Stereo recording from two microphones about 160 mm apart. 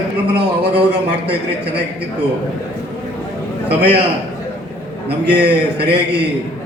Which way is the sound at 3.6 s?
90° right.